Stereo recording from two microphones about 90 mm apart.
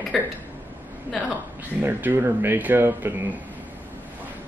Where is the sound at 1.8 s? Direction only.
20° right (ahead or behind).